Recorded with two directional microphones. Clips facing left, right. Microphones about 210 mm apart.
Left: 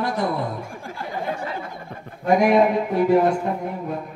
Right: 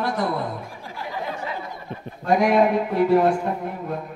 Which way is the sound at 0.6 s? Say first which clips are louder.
Left 2 dB; 50° left (ahead or behind).